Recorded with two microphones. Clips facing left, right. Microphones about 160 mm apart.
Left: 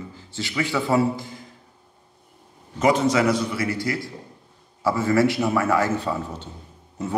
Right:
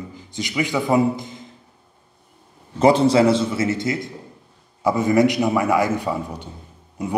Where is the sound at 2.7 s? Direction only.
30° right (ahead or behind).